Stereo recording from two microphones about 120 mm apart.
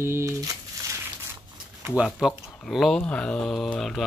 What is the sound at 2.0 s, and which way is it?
Speech, centre (ahead or behind).